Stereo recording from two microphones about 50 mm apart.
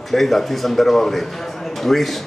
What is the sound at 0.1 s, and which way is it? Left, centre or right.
A man's voice, centre.